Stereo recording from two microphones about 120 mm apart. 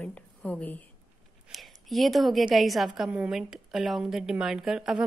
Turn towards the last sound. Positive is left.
turn(degrees=-5)  # may be behind; listen again after turning